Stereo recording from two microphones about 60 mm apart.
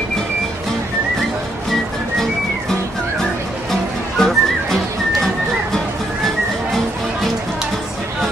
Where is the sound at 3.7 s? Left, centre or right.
Centre.